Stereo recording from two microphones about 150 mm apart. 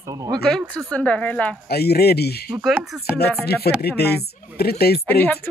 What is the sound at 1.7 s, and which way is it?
Speech, 90° left.